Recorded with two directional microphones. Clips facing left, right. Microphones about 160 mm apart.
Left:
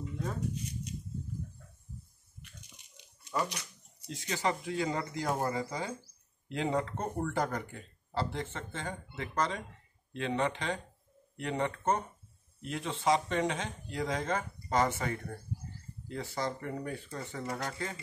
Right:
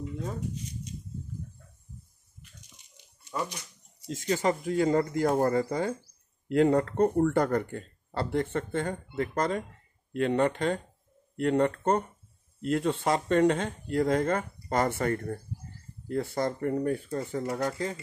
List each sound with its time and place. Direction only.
4.1 s speech: 45° right (ahead or behind)